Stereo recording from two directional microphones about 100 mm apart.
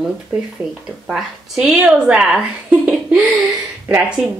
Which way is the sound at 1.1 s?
10° right (ahead or behind).